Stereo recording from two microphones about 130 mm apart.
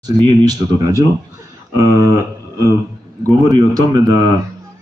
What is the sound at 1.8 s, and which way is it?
Speech, 25° right (ahead or behind).